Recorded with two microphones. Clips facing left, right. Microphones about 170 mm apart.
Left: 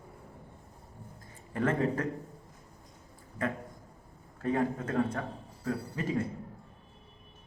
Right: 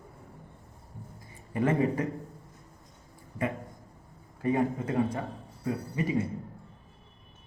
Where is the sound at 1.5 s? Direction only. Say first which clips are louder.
Right 3 dB; 10° right (ahead or behind).